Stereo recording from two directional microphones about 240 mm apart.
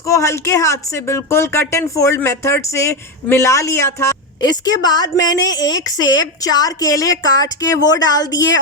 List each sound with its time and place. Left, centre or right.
0.1 s speech: centre